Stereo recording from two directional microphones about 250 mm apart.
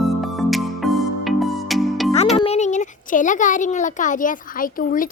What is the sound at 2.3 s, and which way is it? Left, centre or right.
A child's voice, left.